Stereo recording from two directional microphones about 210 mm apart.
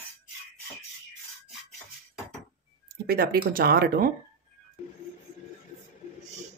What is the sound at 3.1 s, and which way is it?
Speech, 45° right (ahead or behind).